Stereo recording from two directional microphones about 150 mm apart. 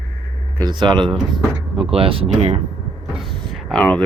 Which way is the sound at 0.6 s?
30° right (ahead or behind).